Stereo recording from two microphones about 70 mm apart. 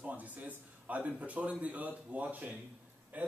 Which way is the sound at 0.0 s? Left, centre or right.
Right.